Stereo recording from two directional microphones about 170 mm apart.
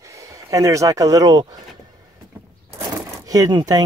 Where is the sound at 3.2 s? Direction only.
20° right (ahead or behind).